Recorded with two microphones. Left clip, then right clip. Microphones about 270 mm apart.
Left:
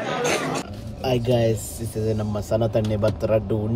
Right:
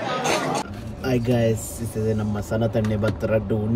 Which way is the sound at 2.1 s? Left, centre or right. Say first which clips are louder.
Left 5 dB; centre.